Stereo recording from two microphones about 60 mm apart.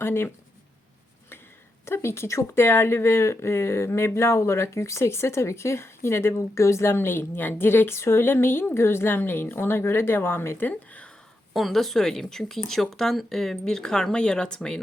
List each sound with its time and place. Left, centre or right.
0.0 s speech: left
1.8 s speech: left
10.7 s a sound: left
11.5 s speech: centre